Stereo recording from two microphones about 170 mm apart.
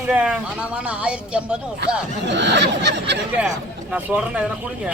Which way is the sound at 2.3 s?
90° right.